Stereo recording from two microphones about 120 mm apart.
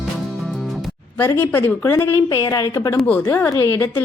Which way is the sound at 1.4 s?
15° left (ahead or behind).